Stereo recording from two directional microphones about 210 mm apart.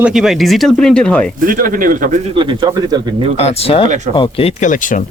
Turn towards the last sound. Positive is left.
turn(degrees=35)  # may be behind; listen again after turning